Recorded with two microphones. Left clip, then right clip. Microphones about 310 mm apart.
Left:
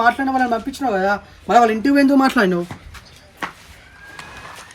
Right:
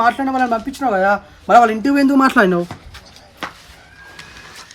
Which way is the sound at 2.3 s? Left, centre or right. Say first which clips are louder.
Right 4 dB; centre.